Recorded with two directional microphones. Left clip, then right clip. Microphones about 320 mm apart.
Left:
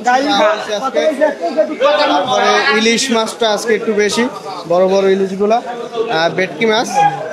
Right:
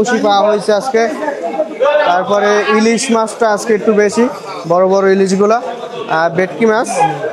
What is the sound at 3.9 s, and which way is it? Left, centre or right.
Speech, centre.